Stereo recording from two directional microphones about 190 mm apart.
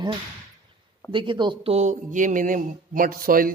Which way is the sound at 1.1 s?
25° right (ahead or behind).